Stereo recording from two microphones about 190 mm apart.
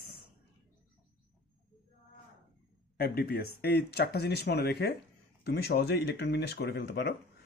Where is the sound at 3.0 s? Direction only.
55° left (ahead or behind).